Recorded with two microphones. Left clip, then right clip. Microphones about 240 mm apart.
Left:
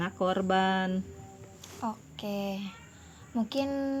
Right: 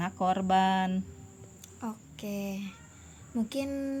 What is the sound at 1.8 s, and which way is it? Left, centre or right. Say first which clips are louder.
A woman's voice: left 4 dB; right.